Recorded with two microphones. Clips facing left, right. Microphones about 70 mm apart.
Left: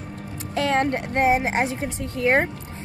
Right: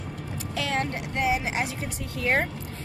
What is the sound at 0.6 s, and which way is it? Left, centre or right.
A woman's voice, left.